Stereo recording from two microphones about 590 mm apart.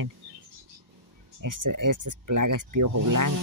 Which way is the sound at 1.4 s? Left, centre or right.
Right.